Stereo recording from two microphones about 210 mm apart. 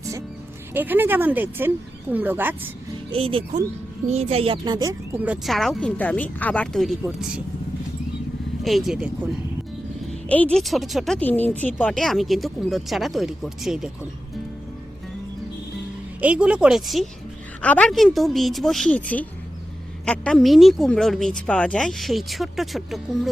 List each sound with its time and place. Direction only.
0.7 s speech: 10° right (ahead or behind)
3.1 s speech: 25° right (ahead or behind); by 7.4 s 5° right (ahead or behind)
8.6 s speech: centre (ahead or behind)
10.1 s speech: 5° left (ahead or behind)
16.2 s speech: 5° right (ahead or behind)